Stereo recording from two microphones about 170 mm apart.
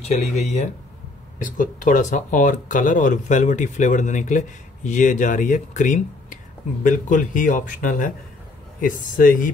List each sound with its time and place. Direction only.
0.1 s speech: 40° left (ahead or behind)
1.4 s speech: 50° left (ahead or behind)